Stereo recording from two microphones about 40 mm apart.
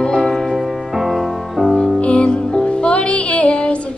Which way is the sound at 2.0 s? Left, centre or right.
Left.